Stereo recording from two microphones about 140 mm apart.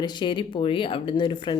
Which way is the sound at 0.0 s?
30° left (ahead or behind).